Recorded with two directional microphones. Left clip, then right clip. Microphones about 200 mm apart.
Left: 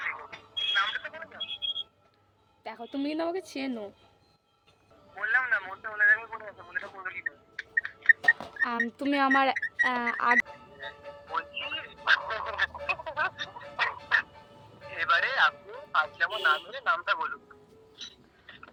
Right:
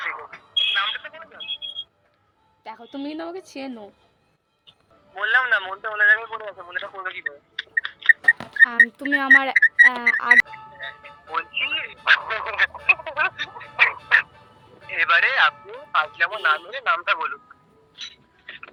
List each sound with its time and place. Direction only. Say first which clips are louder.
0.0 s a sound: right 5 dB; 25° right (ahead or behind); by 1.5 s 5° right (ahead or behind)
2.6 s a woman's voice: right 1 dB; 5° left (ahead or behind)
5.1 s speech: right 7 dB; 30° right (ahead or behind)
8.3 s speech: right 9 dB; 15° left (ahead or behind)
11.3 s telephone: right 9 dB; 10° right (ahead or behind)
14.9 s speech: right 8 dB; 10° right (ahead or behind)
17.9 s mechanisms: right 8 dB; 10° right (ahead or behind)